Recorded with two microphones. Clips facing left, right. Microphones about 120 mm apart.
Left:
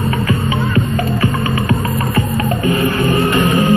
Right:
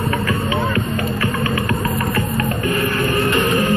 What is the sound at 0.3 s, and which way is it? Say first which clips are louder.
Music: left 3 dB; 25° left (ahead or behind).